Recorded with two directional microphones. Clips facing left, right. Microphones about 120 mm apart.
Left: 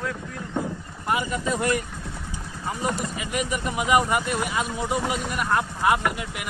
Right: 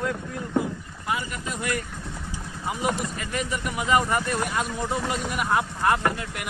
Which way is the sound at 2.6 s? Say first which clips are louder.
Right 1 dB; 10° right (ahead or behind).